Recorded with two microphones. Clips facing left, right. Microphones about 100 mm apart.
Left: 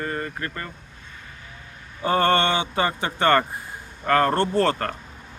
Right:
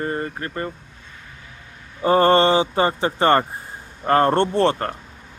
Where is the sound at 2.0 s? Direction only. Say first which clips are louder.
Right 5 dB; 30° right (ahead or behind).